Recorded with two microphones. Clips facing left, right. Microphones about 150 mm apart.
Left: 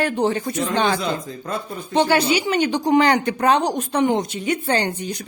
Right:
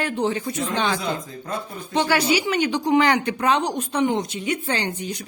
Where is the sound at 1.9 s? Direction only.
25° left (ahead or behind).